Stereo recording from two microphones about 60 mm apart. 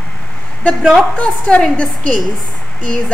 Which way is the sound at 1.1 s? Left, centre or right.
Centre.